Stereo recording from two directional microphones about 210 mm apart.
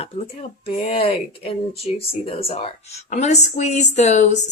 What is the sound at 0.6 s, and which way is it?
Speech, 25° left (ahead or behind).